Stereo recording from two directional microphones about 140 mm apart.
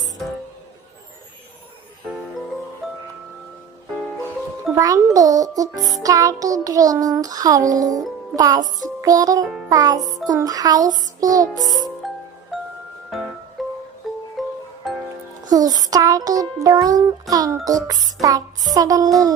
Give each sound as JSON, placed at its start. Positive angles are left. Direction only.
{"t": 2.8, "sound": "music", "side_deg": 0}
{"t": 4.7, "sound": "music", "side_deg": -25}
{"t": 12.0, "sound": "music", "side_deg": 0}
{"t": 15.4, "sound": "music", "side_deg": -25}